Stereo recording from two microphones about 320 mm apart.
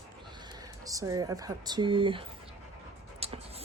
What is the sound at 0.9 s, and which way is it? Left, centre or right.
Speech, centre.